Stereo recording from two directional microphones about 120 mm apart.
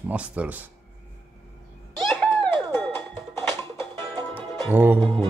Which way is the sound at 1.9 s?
5° left (ahead or behind).